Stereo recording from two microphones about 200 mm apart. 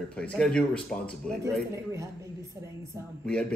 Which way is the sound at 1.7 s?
15° right (ahead or behind).